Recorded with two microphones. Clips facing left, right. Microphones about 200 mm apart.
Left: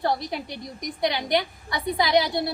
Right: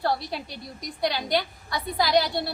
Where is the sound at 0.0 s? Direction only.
20° left (ahead or behind).